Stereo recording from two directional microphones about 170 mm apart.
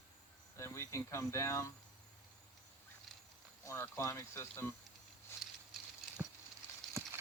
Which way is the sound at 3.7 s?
15° left (ahead or behind).